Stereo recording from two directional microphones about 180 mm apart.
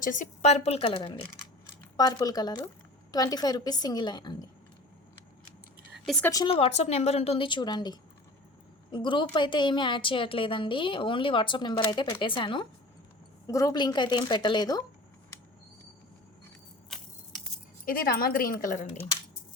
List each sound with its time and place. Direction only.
0.0 s a woman's voice: 45° left (ahead or behind); by 4.4 s 25° left (ahead or behind)
6.2 s a woman's voice: 25° left (ahead or behind)
17.8 s a woman's voice: 55° left (ahead or behind)